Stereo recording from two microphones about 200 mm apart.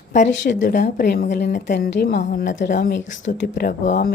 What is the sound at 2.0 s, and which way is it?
A woman's voice, 50° left (ahead or behind).